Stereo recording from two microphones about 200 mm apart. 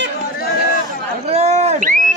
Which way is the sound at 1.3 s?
35° right (ahead or behind).